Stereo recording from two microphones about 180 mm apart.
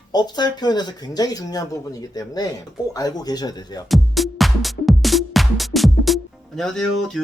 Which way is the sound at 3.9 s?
Centre (ahead or behind).